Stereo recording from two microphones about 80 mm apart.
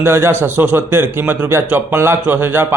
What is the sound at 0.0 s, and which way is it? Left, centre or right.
A man's voice, right.